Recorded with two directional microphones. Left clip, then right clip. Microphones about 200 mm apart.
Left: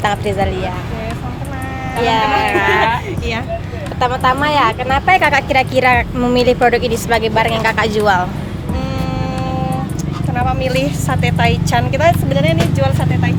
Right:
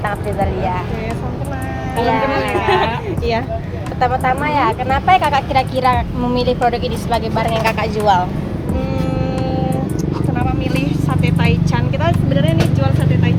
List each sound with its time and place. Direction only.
2.0 s speech: 30° left (ahead or behind)
4.0 s speech: 25° left (ahead or behind); by 7.9 s 40° left (ahead or behind)
8.0 s speech: 25° left (ahead or behind)
10.3 s speech: 55° left (ahead or behind)